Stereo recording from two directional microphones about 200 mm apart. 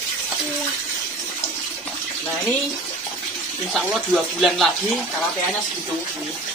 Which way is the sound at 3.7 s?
Centre (ahead or behind).